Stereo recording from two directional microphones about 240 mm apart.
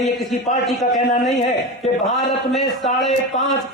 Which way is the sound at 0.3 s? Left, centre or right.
Left.